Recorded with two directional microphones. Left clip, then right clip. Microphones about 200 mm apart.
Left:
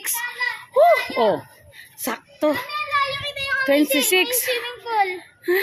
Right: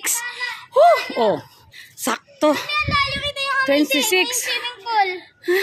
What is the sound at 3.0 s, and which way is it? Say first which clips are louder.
Child singing: right 2 dB; 60° right (ahead or behind).